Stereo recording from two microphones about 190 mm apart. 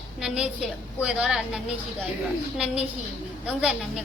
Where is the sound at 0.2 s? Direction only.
5° right (ahead or behind).